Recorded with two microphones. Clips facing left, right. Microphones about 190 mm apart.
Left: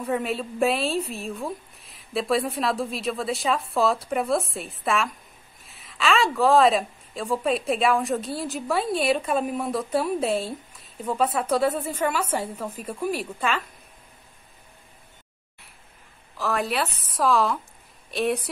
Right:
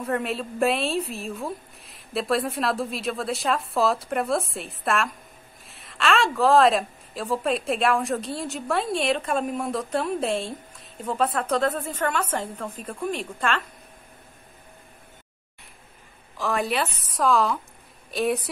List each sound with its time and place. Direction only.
0.0 s a woman's voice: centre (ahead or behind)
16.3 s a woman's voice: centre (ahead or behind)